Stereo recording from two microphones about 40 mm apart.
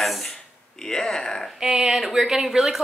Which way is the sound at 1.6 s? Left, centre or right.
Centre.